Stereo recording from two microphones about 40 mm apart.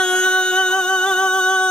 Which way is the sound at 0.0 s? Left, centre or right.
Left.